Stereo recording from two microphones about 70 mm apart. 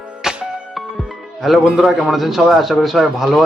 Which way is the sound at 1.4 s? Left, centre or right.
Centre.